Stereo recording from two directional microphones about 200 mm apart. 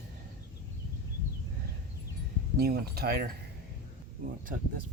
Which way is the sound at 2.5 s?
50° right (ahead or behind).